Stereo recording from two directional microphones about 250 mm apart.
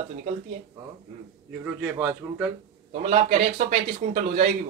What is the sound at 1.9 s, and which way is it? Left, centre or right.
Speech, centre.